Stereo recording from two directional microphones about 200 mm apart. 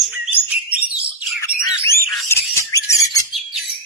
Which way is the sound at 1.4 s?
15° left (ahead or behind).